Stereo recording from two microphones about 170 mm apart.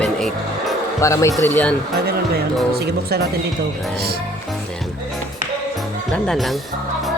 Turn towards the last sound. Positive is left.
turn(degrees=0)  # may be behind; listen again after turning